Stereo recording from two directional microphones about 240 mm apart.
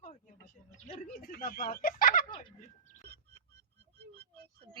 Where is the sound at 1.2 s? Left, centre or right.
Left.